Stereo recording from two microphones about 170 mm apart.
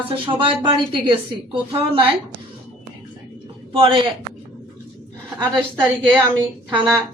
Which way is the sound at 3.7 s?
30° right (ahead or behind).